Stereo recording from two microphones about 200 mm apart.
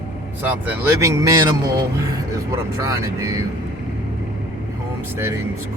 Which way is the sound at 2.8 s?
15° right (ahead or behind).